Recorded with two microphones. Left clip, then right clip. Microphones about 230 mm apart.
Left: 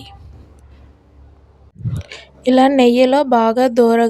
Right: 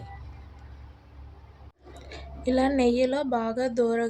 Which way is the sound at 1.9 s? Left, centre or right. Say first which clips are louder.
Left 7 dB; left.